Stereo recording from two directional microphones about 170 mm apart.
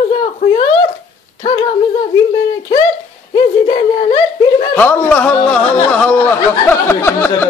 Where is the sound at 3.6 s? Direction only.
30° left (ahead or behind).